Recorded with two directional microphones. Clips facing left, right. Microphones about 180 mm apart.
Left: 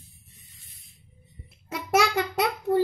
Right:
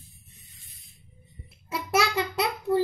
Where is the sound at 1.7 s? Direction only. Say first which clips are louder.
Left 2 dB; 50° left (ahead or behind).